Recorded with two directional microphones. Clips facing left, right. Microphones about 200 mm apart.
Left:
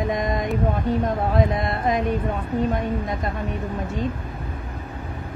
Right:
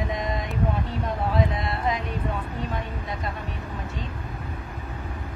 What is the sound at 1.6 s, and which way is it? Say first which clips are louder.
Speech: left 5 dB; 50° left (ahead or behind).